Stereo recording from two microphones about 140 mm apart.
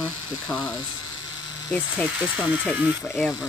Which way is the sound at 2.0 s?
10° right (ahead or behind).